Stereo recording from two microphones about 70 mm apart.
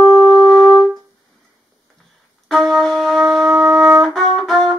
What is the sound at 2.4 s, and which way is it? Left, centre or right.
Wind instrument, centre.